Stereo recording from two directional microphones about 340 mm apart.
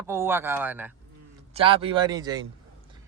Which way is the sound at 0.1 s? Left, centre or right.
Centre.